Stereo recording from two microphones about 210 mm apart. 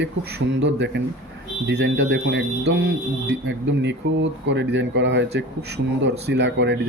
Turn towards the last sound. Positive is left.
turn(degrees=-55)  # may be behind; listen again after turning